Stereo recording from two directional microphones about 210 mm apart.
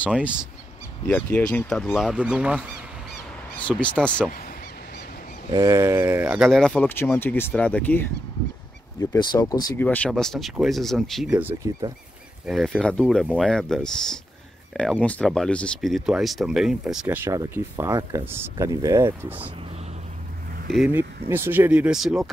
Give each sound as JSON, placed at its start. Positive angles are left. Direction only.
{"t": 0.1, "sound": "speech", "side_deg": -5}
{"t": 1.0, "sound": "speech", "side_deg": 5}
{"t": 3.5, "sound": "speech", "side_deg": 5}
{"t": 5.5, "sound": "speech", "side_deg": -15}
{"t": 9.1, "sound": "speech", "side_deg": 20}
{"t": 9.8, "sound": "speech", "side_deg": 5}
{"t": 20.7, "sound": "speech", "side_deg": -5}